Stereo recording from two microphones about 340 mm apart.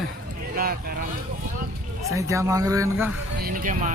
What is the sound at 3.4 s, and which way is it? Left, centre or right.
Speech, right.